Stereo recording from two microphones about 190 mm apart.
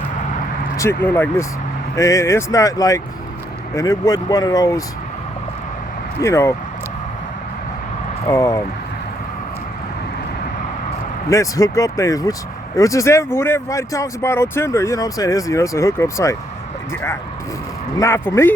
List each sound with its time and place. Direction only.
0.8 s speech: 15° left (ahead or behind)
6.2 s speech: 15° left (ahead or behind)
8.3 s speech: 15° left (ahead or behind)
11.3 s speech: 15° left (ahead or behind)
17.9 s speech: 15° left (ahead or behind)